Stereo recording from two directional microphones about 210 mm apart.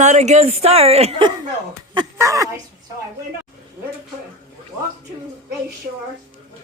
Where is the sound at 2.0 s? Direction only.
15° right (ahead or behind).